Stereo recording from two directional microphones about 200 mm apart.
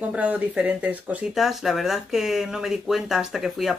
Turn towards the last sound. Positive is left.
turn(degrees=0)  # may be behind; listen again after turning